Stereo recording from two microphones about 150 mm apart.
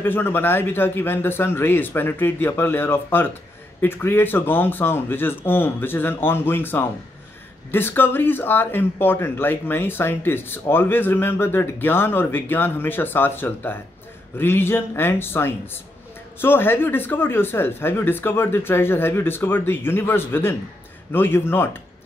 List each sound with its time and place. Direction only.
0.0 s a man's voice: 15° left (ahead or behind)